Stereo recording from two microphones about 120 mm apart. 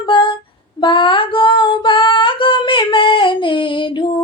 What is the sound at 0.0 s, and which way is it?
Female singing, 45° left (ahead or behind).